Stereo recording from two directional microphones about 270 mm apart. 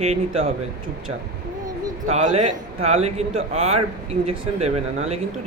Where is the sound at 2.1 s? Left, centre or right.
Right.